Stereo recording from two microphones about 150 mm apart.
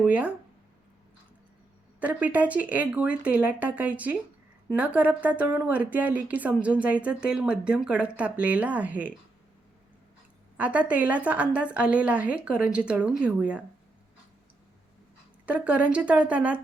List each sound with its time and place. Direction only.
0.0 s speech: 10° right (ahead or behind)
2.0 s speech: 10° right (ahead or behind)
10.6 s speech: 10° right (ahead or behind)
15.4 s speech: 10° right (ahead or behind)